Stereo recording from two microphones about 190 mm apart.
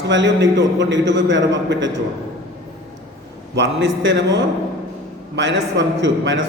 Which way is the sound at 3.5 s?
70° right (ahead or behind).